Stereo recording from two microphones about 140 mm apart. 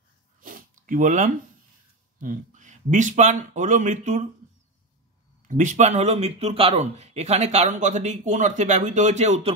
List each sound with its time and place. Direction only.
0.4 s a sound: 75° right (ahead or behind)
2.1 s speech: 65° right (ahead or behind)
5.5 s speech: 65° right (ahead or behind)